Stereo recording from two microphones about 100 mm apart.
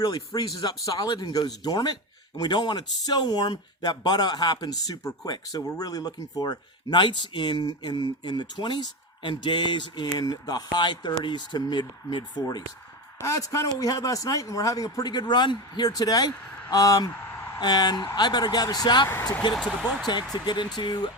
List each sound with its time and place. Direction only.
0.0 s speech: 45° left (ahead or behind)
10.2 s a man's voice: 40° left (ahead or behind)
19.5 s speech: 10° left (ahead or behind)
20.1 s speech: 50° left (ahead or behind)